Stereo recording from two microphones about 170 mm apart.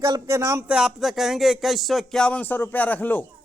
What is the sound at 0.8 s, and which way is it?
A man's voice, centre (ahead or behind).